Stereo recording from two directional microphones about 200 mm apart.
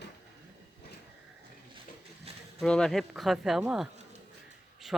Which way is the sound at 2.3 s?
30° right (ahead or behind).